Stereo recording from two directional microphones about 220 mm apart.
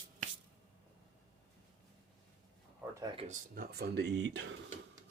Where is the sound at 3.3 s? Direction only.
45° right (ahead or behind).